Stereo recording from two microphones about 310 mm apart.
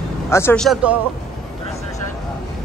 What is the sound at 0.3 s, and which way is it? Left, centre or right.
Speech, centre.